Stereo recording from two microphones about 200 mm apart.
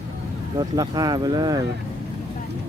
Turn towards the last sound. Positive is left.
turn(degrees=-20)  # may be behind; listen again after turning